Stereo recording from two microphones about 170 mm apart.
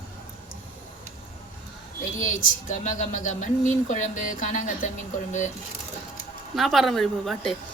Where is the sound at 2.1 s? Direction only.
50° left (ahead or behind).